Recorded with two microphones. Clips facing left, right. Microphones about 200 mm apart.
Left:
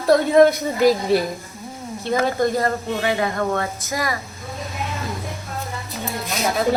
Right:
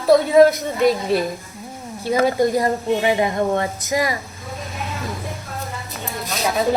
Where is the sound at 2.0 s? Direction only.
15° right (ahead or behind).